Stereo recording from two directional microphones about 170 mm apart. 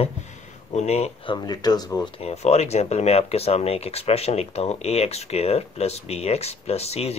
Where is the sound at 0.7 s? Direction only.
40° left (ahead or behind); by 2.0 s 20° left (ahead or behind).